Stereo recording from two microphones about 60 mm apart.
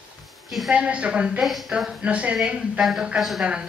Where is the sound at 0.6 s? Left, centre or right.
Centre.